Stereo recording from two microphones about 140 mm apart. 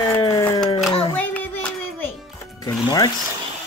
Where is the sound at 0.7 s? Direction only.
Centre (ahead or behind).